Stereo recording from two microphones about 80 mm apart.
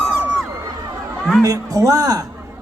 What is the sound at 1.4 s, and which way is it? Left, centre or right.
Speech, right.